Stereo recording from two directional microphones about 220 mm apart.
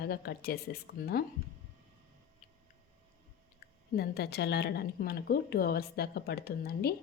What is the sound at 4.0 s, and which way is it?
A woman's voice, 50° left (ahead or behind).